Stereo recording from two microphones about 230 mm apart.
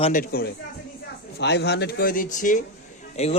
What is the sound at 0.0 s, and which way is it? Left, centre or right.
Speech, left.